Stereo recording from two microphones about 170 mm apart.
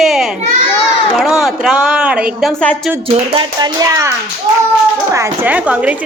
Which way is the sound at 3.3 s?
25° right (ahead or behind).